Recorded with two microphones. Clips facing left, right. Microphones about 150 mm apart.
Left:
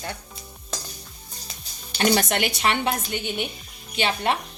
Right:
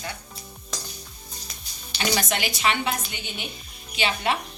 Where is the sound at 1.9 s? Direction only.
50° left (ahead or behind).